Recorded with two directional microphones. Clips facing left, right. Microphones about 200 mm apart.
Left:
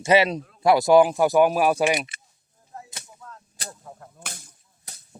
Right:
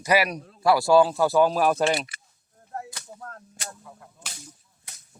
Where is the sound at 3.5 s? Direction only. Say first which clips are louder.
Left 1 dB; 45° left (ahead or behind).